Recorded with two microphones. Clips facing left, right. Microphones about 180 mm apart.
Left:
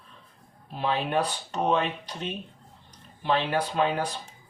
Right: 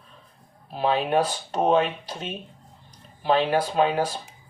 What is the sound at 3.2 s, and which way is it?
Speech, 35° right (ahead or behind).